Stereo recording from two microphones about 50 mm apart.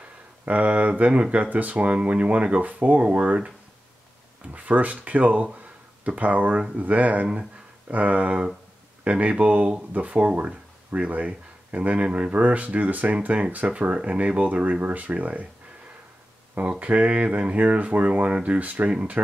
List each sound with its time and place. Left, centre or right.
0.5 s speech: right
10.9 s speech: right
16.8 s speech: right